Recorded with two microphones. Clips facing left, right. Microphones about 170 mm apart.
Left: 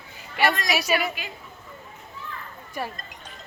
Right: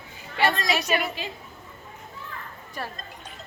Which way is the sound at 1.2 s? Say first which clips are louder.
Right 4 dB; 30° right (ahead or behind).